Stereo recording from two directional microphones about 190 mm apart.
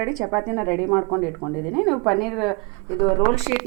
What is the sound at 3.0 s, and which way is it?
Speech, 35° left (ahead or behind).